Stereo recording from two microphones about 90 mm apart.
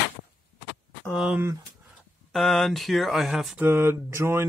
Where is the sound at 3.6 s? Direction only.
25° right (ahead or behind).